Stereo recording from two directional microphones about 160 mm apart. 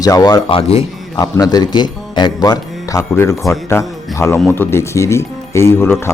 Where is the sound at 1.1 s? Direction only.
25° left (ahead or behind).